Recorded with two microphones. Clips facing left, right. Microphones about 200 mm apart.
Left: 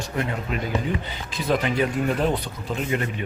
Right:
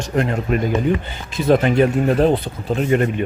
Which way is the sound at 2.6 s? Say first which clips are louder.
Right 9 dB; 50° right (ahead or behind).